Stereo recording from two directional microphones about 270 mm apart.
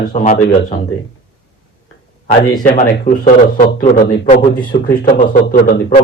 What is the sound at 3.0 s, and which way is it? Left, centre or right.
A man's voice, left.